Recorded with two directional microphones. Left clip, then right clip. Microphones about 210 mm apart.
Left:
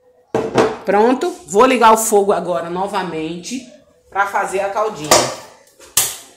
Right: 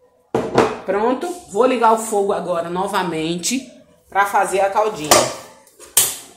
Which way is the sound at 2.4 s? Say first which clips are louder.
Left 1 dB; 10° left (ahead or behind).